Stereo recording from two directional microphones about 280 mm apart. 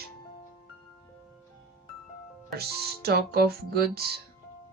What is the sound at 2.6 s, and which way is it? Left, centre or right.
Speech, right.